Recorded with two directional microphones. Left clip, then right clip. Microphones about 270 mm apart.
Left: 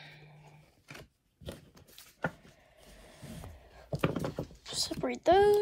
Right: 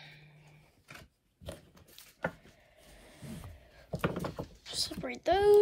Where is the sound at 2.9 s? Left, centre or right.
Centre.